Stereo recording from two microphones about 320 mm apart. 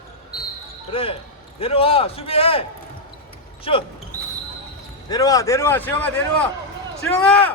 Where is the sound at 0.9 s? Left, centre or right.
Centre.